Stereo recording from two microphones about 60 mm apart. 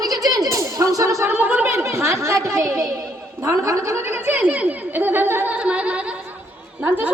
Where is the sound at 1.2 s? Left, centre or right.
Right.